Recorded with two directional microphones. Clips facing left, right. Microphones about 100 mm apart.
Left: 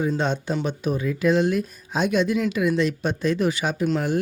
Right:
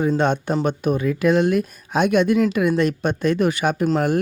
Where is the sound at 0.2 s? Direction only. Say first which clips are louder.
Right 5 dB; 55° right (ahead or behind).